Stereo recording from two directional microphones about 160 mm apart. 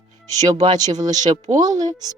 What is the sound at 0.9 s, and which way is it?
Speech, 25° right (ahead or behind).